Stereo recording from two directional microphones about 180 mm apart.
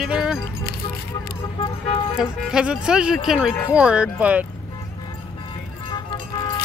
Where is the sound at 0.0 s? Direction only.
5° right (ahead or behind).